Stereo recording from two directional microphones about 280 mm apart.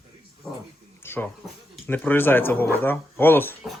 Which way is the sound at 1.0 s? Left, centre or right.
Centre.